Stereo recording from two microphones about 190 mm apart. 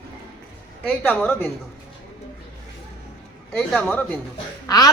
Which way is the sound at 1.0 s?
10° left (ahead or behind).